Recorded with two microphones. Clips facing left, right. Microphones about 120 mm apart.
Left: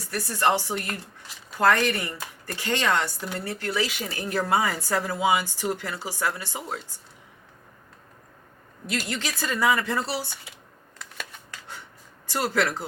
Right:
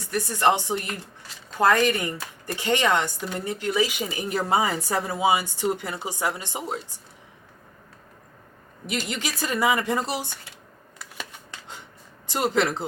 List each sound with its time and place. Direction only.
0.1 s speech: 20° right (ahead or behind)
8.9 s speech: 15° right (ahead or behind)
10.9 s shuffling cards: 5° right (ahead or behind)
11.3 s shuffling cards: 20° right (ahead or behind)
12.3 s speech: 20° right (ahead or behind)